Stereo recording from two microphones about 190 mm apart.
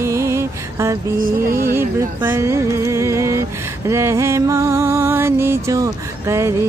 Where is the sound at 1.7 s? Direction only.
10° right (ahead or behind).